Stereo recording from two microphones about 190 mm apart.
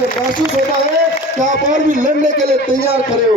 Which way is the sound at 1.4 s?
40° right (ahead or behind).